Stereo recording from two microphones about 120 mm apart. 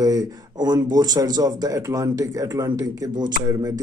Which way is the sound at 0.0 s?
35° right (ahead or behind).